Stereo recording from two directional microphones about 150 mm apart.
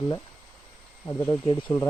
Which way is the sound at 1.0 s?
25° left (ahead or behind).